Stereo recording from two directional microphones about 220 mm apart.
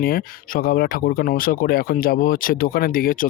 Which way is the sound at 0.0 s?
40° left (ahead or behind).